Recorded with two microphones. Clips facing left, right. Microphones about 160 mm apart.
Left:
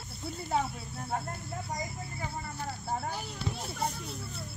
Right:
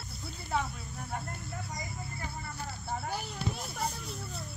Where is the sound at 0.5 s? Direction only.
35° left (ahead or behind).